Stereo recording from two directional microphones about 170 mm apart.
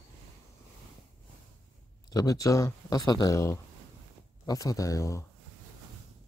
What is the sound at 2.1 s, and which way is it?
Speech, 20° left (ahead or behind).